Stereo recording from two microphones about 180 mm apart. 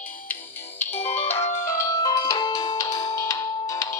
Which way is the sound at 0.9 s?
35° left (ahead or behind).